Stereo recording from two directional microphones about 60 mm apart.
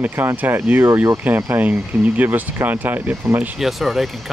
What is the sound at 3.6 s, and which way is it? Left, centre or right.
Speech, centre.